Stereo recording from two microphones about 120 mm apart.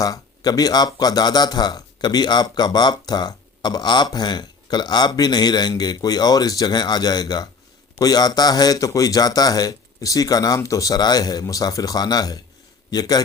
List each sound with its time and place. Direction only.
0.0 s speech: 30° left (ahead or behind)